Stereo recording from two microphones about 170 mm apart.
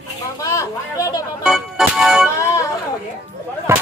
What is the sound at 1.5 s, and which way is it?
Music, centre (ahead or behind).